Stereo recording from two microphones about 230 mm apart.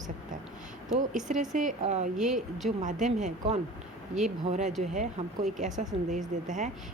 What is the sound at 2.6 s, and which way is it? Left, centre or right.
A woman's voice, right.